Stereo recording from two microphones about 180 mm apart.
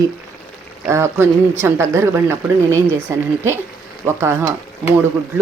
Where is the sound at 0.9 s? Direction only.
15° right (ahead or behind).